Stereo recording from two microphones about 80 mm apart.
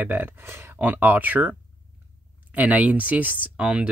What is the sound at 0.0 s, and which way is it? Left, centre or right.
Speech, right.